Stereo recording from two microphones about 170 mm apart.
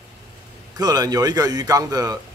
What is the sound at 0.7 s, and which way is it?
Speech, 25° right (ahead or behind).